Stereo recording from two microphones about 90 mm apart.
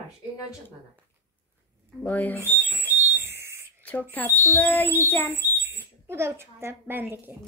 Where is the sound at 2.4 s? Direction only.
25° right (ahead or behind).